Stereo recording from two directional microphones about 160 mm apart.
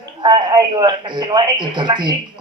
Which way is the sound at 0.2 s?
30° right (ahead or behind).